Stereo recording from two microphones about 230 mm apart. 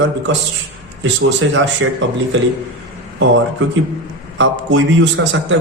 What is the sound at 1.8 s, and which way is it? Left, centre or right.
Speech, right.